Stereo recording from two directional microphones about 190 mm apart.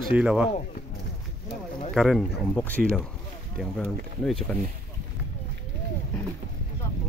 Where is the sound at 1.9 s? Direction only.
Centre (ahead or behind).